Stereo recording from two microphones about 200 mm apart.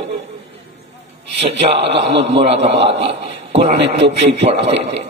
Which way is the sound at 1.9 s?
60° right (ahead or behind).